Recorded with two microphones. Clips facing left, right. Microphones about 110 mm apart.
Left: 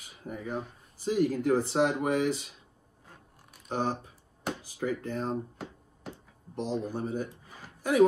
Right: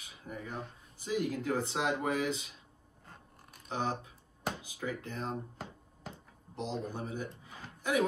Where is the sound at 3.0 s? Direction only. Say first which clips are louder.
Even; centre (ahead or behind).